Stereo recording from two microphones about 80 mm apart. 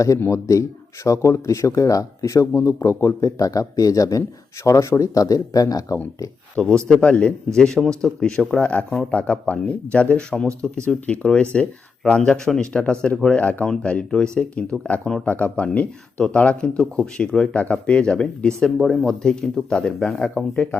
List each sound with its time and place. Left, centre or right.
0.3 s speech: left
6.6 s speech: centre
15.0 s speech: centre
15.3 s speech: centre